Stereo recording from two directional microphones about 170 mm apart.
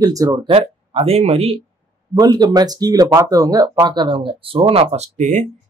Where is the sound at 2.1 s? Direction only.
25° right (ahead or behind).